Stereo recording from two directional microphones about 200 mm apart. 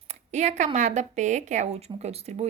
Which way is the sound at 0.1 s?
35° right (ahead or behind).